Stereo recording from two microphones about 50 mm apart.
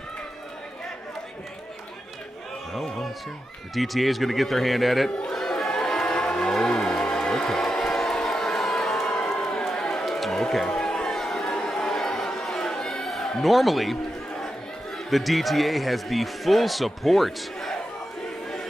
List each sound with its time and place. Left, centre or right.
2.7 s a sound: centre
3.7 s a man's voice: centre
5.3 s music: centre
9.1 s run: centre
10.0 s a sound: centre
13.4 s a man's voice: centre
15.0 s a man's voice: centre